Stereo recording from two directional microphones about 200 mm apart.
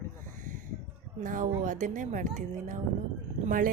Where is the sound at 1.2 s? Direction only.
40° right (ahead or behind).